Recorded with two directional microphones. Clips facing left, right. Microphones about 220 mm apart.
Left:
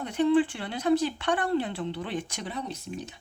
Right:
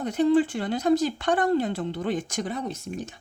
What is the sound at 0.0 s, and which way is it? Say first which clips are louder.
Speech: right 2 dB; 40° right (ahead or behind).